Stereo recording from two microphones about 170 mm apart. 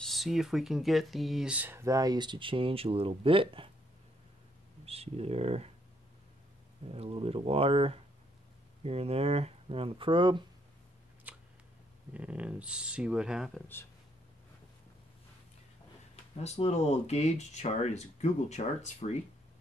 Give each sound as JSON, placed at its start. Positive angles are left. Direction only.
{"t": 0.0, "sound": "speech", "side_deg": 0}
{"t": 4.8, "sound": "speech", "side_deg": -35}
{"t": 6.9, "sound": "speech", "side_deg": -35}
{"t": 11.3, "sound": "a sound", "side_deg": -10}
{"t": 12.1, "sound": "speech", "side_deg": -10}
{"t": 13.6, "sound": "speech", "side_deg": 10}
{"t": 16.3, "sound": "speech", "side_deg": 40}